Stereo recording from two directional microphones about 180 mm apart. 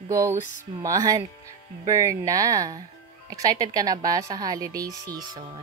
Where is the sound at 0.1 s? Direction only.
15° right (ahead or behind).